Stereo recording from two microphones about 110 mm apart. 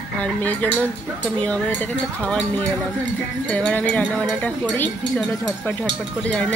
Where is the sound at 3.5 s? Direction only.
15° left (ahead or behind).